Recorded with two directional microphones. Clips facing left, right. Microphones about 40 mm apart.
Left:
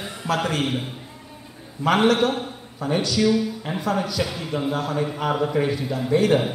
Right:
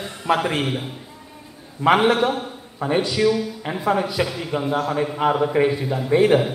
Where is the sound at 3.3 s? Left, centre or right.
Centre.